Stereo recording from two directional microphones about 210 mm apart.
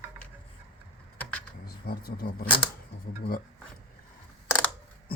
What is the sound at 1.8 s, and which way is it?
Speech, 45° left (ahead or behind).